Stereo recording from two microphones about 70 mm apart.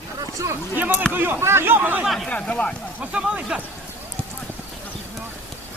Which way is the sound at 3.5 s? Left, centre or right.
Centre.